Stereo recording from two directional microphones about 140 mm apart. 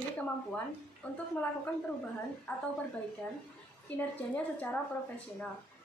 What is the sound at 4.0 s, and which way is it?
Speech, 10° left (ahead or behind).